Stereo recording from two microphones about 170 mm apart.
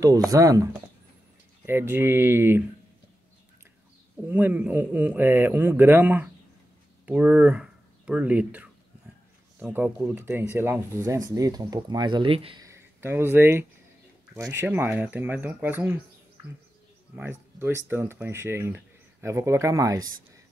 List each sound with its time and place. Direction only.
0.3 s speech: 20° right (ahead or behind)
1.7 s speech: 15° right (ahead or behind)
4.3 s speech: 10° right (ahead or behind); by 12.6 s 35° right (ahead or behind)
12.6 s speech: 15° right (ahead or behind)
17.1 s speech: 10° right (ahead or behind)